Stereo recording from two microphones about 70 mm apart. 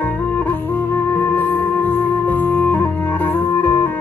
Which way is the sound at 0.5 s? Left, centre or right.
Left.